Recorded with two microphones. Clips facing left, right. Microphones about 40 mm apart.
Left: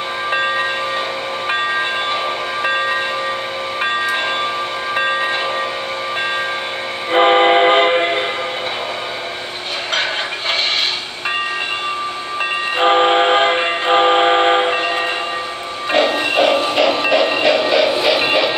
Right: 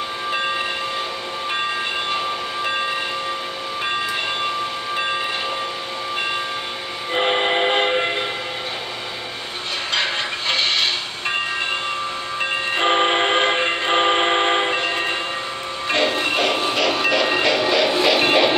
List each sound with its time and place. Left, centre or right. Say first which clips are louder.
7.1 s train: left 8 dB; left
12.7 s train: left 5 dB; centre
14.8 s train: left 4 dB; left
15.9 s music: left 4 dB; centre